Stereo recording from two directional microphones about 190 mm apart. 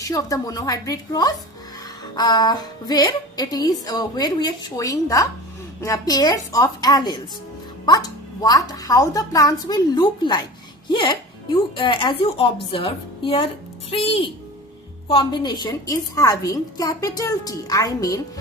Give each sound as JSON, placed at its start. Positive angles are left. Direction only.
{"t": 0.1, "sound": "a woman's voice", "side_deg": 20}